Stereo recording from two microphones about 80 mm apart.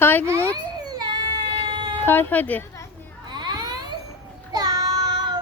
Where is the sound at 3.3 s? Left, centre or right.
Right.